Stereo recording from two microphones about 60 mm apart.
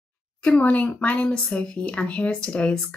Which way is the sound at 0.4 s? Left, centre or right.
Left.